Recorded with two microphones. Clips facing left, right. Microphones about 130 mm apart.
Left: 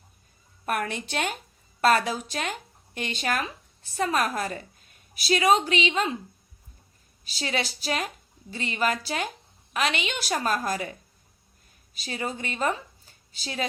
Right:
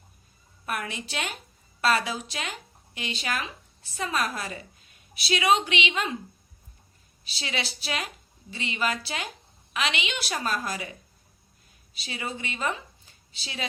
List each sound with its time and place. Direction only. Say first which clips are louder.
0.6 s a woman's voice: left 4 dB; 50° left (ahead or behind); by 6.1 s 35° left (ahead or behind)
7.3 s a woman's voice: left 4 dB; 45° left (ahead or behind)
11.9 s a woman's voice: left 3 dB; 45° left (ahead or behind)